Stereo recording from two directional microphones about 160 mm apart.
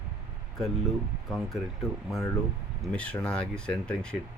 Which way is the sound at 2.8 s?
5° left (ahead or behind).